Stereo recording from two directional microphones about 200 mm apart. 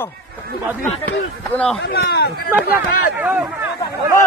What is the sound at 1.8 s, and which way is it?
Speech, 55° left (ahead or behind).